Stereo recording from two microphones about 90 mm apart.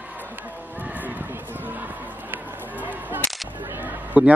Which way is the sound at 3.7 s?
15° right (ahead or behind).